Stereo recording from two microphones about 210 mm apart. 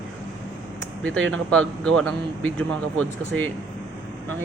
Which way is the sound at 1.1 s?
70° right (ahead or behind).